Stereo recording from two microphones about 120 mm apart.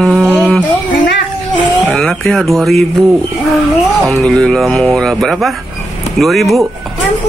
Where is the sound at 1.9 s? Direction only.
5° left (ahead or behind).